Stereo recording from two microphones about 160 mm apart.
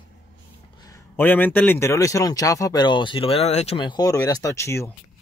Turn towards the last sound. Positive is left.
turn(degrees=15)  # may be behind; listen again after turning